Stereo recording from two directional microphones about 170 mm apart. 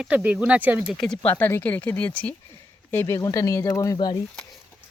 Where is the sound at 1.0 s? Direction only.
5° left (ahead or behind).